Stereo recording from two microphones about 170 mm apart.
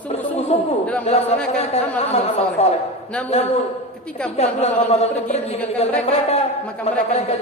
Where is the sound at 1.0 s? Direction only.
40° left (ahead or behind).